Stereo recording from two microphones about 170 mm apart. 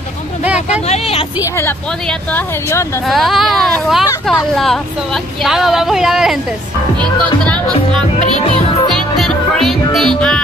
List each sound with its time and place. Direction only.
0.8 s speech: 35° left (ahead or behind)
2.0 s speech: 15° left (ahead or behind)
3.1 s speech: centre (ahead or behind)
7.4 s speech: 5° left (ahead or behind)
8.9 s music: centre (ahead or behind)